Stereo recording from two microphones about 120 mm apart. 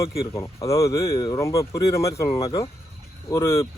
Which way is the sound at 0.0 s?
25° left (ahead or behind).